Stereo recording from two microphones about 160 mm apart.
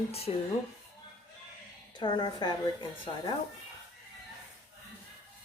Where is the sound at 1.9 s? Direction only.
25° left (ahead or behind).